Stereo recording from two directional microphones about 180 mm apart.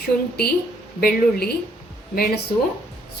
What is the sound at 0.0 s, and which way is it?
Speech, 60° left (ahead or behind).